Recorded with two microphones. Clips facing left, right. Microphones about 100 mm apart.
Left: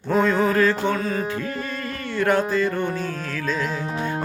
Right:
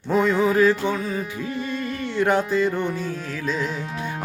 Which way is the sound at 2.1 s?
20° right (ahead or behind).